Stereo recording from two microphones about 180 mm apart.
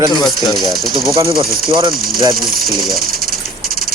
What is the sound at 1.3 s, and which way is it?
Speech, 55° right (ahead or behind).